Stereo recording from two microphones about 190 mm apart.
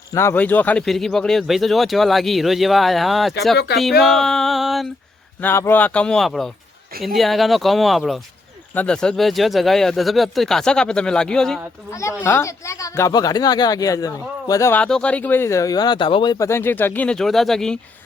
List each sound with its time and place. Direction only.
0.1 s speech: 15° left (ahead or behind)
3.7 s speech: 60° left (ahead or behind)
4.0 s a sound: centre (ahead or behind)
5.4 s speech: 10° left (ahead or behind)